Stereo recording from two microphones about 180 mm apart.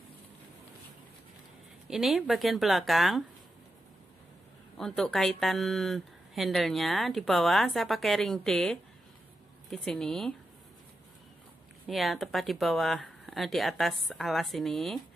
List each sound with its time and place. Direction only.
1.9 s speech: centre (ahead or behind)
4.7 s speech: centre (ahead or behind)
11.9 s speech: centre (ahead or behind)